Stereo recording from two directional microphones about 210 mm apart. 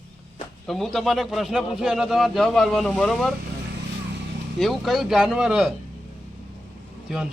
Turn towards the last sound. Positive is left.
turn(degrees=-5)  # may be behind; listen again after turning